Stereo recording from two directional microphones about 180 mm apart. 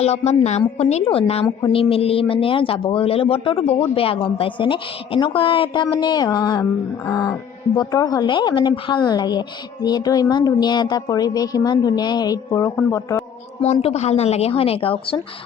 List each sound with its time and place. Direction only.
0.0 s speech: 35° left (ahead or behind); by 13.2 s 15° left (ahead or behind)
13.7 s speech: 35° left (ahead or behind)